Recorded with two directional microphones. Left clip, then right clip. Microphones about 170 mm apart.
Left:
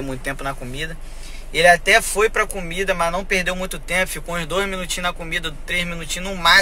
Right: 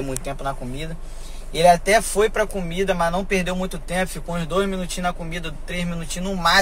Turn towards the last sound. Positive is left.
turn(degrees=0)  # may be behind; listen again after turning